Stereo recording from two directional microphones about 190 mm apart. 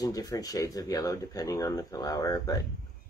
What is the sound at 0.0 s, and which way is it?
Speech, 20° left (ahead or behind).